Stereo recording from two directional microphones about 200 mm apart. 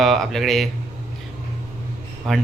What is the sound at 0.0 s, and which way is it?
Speech, centre (ahead or behind).